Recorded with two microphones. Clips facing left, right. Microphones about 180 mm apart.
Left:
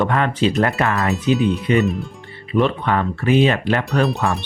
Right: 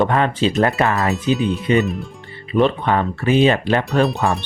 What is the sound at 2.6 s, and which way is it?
Speech, 25° right (ahead or behind).